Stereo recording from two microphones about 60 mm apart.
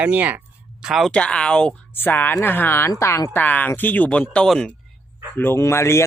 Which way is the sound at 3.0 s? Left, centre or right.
Left.